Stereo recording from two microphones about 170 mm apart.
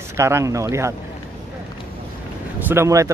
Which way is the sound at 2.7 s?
15° right (ahead or behind).